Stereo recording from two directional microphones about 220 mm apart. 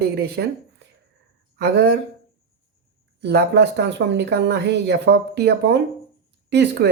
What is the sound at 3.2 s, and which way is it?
Speech, 50° right (ahead or behind).